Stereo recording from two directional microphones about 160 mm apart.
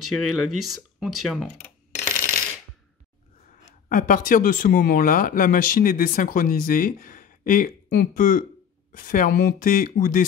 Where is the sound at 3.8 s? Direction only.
55° left (ahead or behind).